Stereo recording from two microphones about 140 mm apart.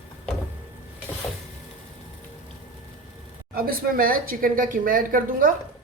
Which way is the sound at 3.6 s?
90° right.